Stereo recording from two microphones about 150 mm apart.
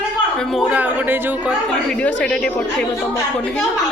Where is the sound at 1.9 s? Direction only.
5° left (ahead or behind).